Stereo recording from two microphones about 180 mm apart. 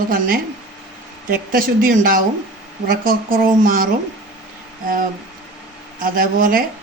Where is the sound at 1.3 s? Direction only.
50° right (ahead or behind).